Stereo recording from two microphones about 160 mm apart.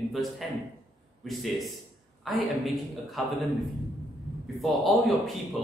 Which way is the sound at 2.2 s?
Centre (ahead or behind).